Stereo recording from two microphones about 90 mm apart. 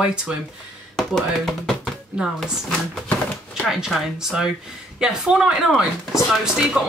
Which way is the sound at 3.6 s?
5° right (ahead or behind).